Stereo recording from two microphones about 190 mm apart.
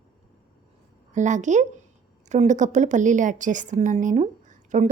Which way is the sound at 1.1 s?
40° right (ahead or behind).